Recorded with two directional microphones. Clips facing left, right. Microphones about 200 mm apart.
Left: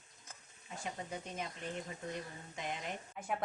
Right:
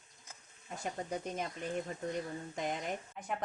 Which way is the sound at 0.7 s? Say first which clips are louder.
Right 4 dB; 45° right (ahead or behind).